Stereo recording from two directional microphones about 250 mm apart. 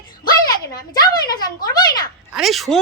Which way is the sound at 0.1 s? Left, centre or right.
Centre.